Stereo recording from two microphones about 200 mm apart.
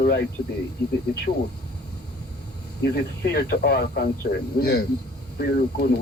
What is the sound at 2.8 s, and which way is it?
Speech, 55° left (ahead or behind).